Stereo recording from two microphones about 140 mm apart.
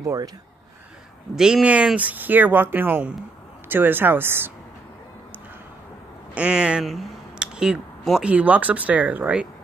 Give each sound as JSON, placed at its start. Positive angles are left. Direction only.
{"t": 0.0, "sound": "speech", "side_deg": -25}
{"t": 1.3, "sound": "speech", "side_deg": -5}
{"t": 6.3, "sound": "speech", "side_deg": -5}